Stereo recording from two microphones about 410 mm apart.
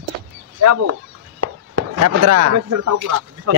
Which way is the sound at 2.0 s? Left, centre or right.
Right.